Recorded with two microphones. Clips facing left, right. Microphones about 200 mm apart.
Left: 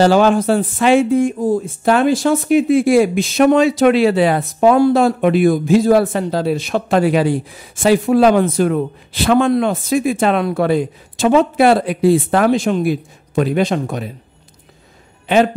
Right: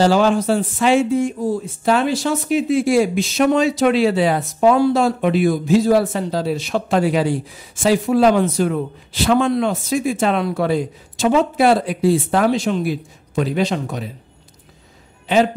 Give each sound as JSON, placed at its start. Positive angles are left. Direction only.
{"t": 0.0, "sound": "speech", "side_deg": 55}